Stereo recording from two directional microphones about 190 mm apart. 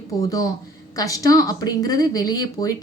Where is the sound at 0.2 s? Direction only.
20° left (ahead or behind).